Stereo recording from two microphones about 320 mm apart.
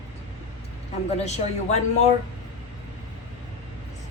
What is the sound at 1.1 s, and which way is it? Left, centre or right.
Speech, centre.